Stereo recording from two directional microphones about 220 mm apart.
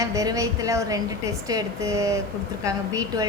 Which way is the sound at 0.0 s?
15° right (ahead or behind).